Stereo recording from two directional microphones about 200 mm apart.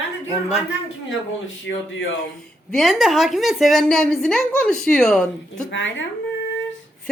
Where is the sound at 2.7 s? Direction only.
Centre (ahead or behind).